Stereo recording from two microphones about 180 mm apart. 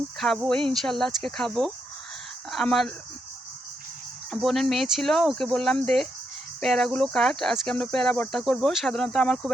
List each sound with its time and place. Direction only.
0.2 s speech: centre (ahead or behind)
4.3 s speech: centre (ahead or behind)